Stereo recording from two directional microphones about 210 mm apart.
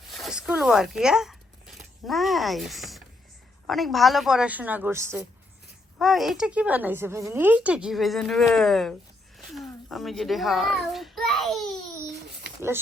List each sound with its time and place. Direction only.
0.1 s zipper: centre (ahead or behind)
3.7 s speech: centre (ahead or behind)
6.0 s a child's voice: centre (ahead or behind)